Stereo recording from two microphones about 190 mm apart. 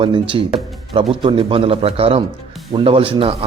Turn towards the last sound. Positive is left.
turn(degrees=-30)  # may be behind; listen again after turning